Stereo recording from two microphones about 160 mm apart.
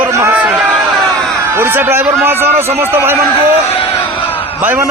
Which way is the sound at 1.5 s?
15° right (ahead or behind).